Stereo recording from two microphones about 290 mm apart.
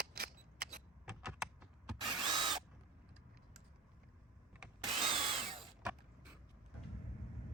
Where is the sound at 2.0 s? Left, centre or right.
Centre.